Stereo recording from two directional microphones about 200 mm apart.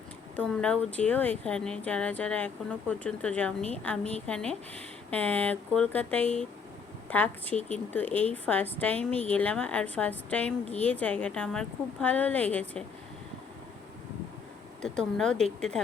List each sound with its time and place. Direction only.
0.3 s speech: 5° left (ahead or behind)
14.8 s speech: 5° left (ahead or behind)